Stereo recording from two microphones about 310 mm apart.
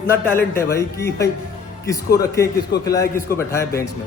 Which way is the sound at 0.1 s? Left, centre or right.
Centre.